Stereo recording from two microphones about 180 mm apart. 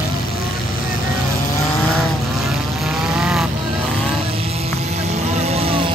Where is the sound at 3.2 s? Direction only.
5° right (ahead or behind).